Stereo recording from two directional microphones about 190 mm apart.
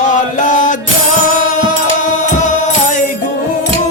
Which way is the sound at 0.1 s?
40° left (ahead or behind).